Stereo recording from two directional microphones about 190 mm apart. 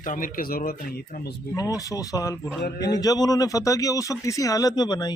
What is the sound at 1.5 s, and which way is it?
Speech, 20° left (ahead or behind).